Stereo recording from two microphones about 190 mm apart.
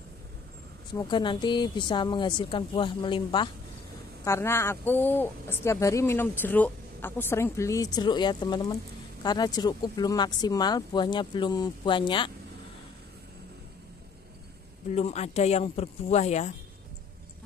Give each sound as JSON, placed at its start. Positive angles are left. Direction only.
{"t": 0.9, "sound": "speech", "side_deg": 25}
{"t": 4.2, "sound": "speech", "side_deg": 15}
{"t": 14.9, "sound": "speech", "side_deg": 35}